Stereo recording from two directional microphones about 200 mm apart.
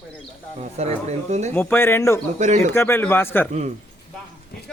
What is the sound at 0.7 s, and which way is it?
Speech, 35° right (ahead or behind).